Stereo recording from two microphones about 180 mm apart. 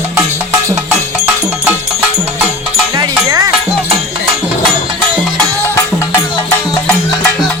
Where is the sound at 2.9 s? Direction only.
20° right (ahead or behind).